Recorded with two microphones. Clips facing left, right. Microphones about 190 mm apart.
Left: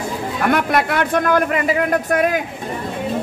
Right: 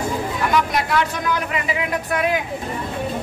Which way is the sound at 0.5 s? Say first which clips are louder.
Left 4 dB; 60° left (ahead or behind).